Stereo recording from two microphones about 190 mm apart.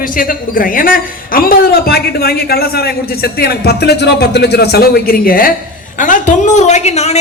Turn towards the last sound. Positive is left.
turn(degrees=35)  # may be behind; listen again after turning